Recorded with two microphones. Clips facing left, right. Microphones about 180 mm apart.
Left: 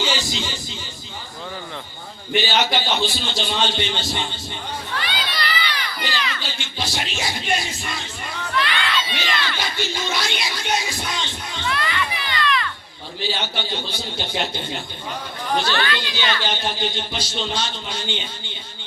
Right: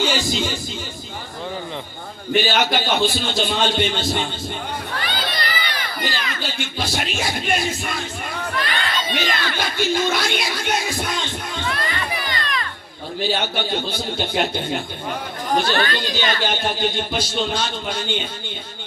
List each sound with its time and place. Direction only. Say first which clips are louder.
0.0 s a sound: right 4 dB; 50° right (ahead or behind)
2.3 s speech: right 2 dB; 50° right (ahead or behind)
5.0 s crowd: right 1 dB; 45° right (ahead or behind)
13.2 s speech: right 4 dB; 50° right (ahead or behind)